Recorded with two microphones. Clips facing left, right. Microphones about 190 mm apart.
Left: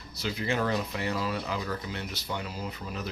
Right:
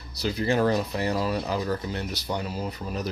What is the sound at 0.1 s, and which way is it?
Speech, 35° right (ahead or behind).